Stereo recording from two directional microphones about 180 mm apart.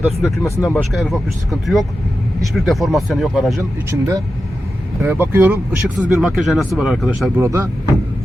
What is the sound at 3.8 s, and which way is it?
Speech, 15° right (ahead or behind).